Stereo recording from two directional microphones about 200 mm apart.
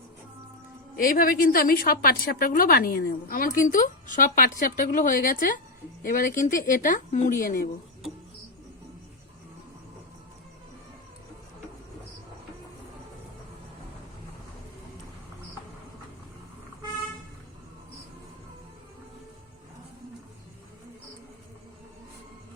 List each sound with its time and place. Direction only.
0.9 s a woman's voice: 45° left (ahead or behind)